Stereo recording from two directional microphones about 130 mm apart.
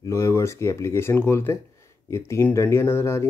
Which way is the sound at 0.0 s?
25° left (ahead or behind).